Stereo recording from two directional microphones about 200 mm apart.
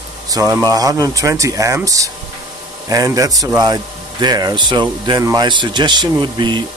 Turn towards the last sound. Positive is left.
turn(degrees=-25)  # may be behind; listen again after turning